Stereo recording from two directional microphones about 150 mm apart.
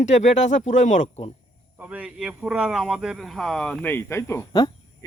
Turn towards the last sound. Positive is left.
turn(degrees=25)  # may be behind; listen again after turning